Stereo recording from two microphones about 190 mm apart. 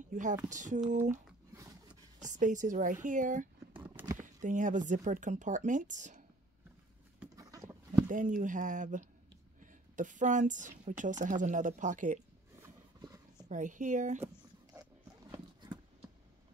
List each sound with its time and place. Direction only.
0.1 s speech: 40° right (ahead or behind)
1.5 s a sound: 15° right (ahead or behind)
2.1 s speech: 40° right (ahead or behind)
3.8 s horse: 10° right (ahead or behind)
4.4 s speech: 40° right (ahead or behind)
7.3 s a sound: 15° right (ahead or behind)
8.1 s a woman's voice: 45° right (ahead or behind)
12.6 s horse: 20° right (ahead or behind)
13.5 s speech: 40° right (ahead or behind)
14.2 s zipper: 10° right (ahead or behind)